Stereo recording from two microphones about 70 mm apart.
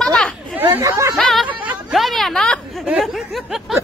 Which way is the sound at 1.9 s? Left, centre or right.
Centre.